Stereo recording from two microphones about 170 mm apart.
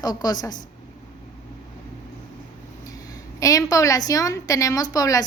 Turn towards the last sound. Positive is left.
turn(degrees=20)  # may be behind; listen again after turning